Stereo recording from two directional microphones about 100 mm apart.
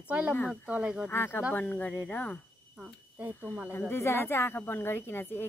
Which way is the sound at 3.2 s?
15° right (ahead or behind).